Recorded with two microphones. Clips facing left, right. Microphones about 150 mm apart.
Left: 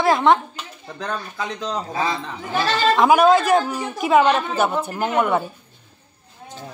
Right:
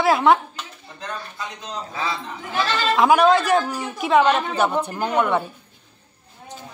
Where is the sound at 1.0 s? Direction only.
75° left (ahead or behind).